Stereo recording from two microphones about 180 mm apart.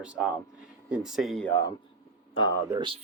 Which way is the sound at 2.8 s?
30° right (ahead or behind).